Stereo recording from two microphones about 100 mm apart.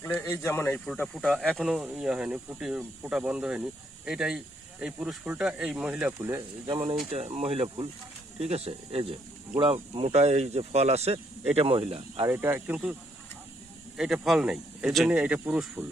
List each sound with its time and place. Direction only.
0.0 s speech: 25° left (ahead or behind)
0.6 s speech: 10° left (ahead or behind); by 6.1 s 15° right (ahead or behind)
6.1 s speech: 30° right (ahead or behind)
6.7 s speech: 60° right (ahead or behind)
7.1 s speech: 85° right; by 9.1 s 70° right (ahead or behind)
9.9 s speech: 80° right; by 12.2 s 65° right (ahead or behind)
12.3 s speech: 25° right (ahead or behind)
13.9 s speech: 5° right (ahead or behind)